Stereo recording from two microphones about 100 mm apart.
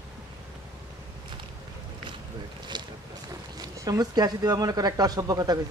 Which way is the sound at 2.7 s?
50° right (ahead or behind).